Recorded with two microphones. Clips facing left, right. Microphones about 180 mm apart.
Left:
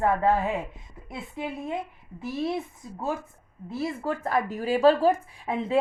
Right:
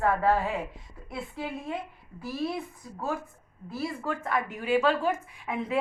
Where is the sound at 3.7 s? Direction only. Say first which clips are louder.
Left 3 dB; 25° left (ahead or behind).